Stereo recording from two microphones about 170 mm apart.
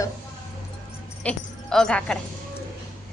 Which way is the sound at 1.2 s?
5° left (ahead or behind).